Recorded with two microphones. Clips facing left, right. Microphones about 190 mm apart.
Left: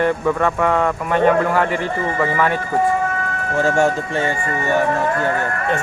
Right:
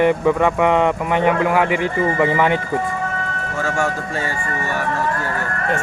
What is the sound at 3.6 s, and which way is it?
Speech, 30° left (ahead or behind).